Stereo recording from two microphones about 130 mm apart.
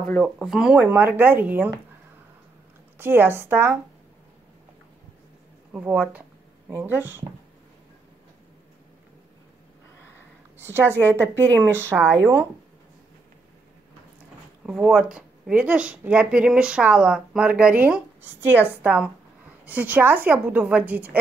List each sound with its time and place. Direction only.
0.0 s speech: 10° left (ahead or behind); by 1.8 s 15° right (ahead or behind)
3.0 s speech: 15° right (ahead or behind)
5.7 s speech: 10° right (ahead or behind)
10.6 s speech: 15° right (ahead or behind)
11.4 s speech: 15° left (ahead or behind)
11.7 s speech: 20° right (ahead or behind)
14.7 s speech: 5° right (ahead or behind)